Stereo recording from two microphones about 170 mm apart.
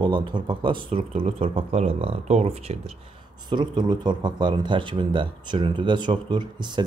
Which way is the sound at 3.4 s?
25° right (ahead or behind).